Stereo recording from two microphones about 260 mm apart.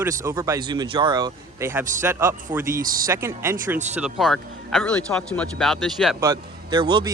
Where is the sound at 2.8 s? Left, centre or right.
Right.